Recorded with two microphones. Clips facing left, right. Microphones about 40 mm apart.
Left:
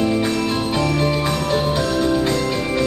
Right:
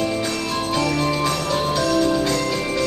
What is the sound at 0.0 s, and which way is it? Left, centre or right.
Jingle bell, centre.